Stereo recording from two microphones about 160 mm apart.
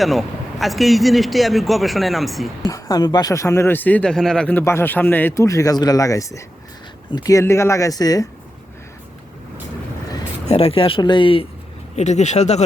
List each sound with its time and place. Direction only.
0.0 s speech: centre (ahead or behind)
2.6 s speech: 20° left (ahead or behind)
10.4 s speech: 40° left (ahead or behind)
11.9 s speech: 45° left (ahead or behind)